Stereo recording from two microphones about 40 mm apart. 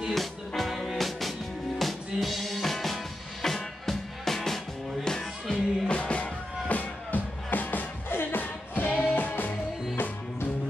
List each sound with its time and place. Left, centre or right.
0.1 s music: centre
5.9 s music: left